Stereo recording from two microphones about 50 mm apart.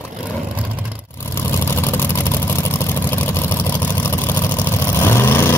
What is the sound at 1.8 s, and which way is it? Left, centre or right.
Vehicle, left.